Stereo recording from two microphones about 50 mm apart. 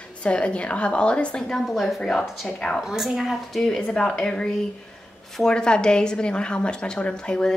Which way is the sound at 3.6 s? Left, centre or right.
Centre.